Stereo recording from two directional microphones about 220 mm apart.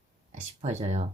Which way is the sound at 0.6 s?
30° right (ahead or behind).